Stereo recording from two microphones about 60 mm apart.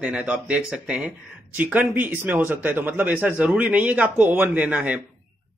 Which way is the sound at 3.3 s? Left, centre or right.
Centre.